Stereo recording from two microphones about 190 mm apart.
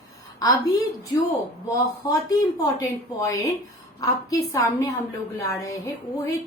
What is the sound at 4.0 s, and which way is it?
A woman's voice, 20° left (ahead or behind).